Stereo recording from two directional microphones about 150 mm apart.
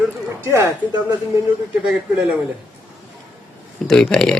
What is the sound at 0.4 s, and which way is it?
Speech, 20° right (ahead or behind).